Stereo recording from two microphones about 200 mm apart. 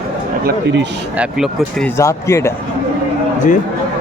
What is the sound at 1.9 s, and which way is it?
Speech, 15° left (ahead or behind).